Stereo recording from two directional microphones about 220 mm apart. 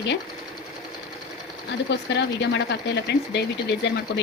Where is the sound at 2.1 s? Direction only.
50° left (ahead or behind).